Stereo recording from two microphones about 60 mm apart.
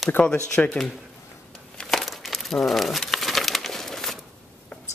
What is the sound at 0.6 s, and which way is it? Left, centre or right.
Speech, left.